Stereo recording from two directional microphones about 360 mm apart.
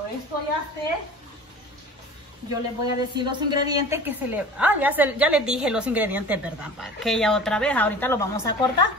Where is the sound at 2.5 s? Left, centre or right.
Centre.